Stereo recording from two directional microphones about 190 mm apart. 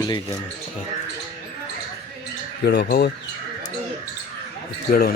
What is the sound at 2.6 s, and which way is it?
Speech, 60° left (ahead or behind).